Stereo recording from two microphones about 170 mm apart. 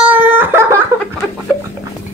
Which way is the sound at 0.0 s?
10° right (ahead or behind).